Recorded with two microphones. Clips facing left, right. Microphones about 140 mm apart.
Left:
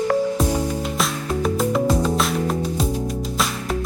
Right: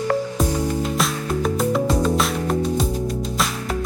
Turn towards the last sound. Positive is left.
turn(degrees=0)  # may be behind; listen again after turning